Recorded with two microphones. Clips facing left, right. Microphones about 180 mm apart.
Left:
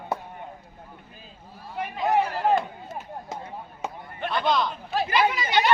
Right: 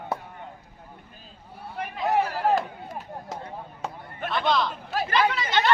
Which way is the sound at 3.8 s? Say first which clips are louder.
Left 2 dB; centre (ahead or behind).